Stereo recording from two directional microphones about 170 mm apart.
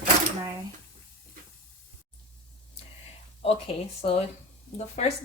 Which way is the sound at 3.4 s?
35° left (ahead or behind).